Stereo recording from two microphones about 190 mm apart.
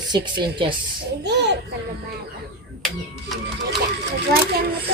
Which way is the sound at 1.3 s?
65° right (ahead or behind).